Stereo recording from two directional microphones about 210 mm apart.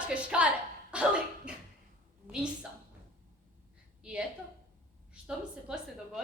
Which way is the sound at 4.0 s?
5° right (ahead or behind).